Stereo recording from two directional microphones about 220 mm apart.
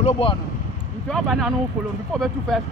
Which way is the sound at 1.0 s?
Centre (ahead or behind).